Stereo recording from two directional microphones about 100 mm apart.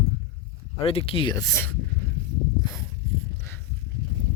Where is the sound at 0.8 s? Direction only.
70° left (ahead or behind).